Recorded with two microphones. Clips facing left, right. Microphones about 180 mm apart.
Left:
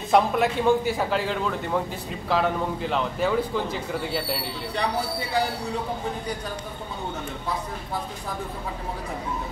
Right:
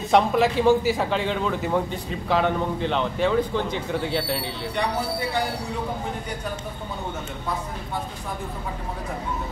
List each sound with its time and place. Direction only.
0.1 s a man's voice: centre (ahead or behind)